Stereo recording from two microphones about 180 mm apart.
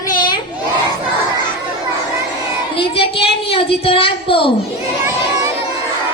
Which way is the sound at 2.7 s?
30° left (ahead or behind).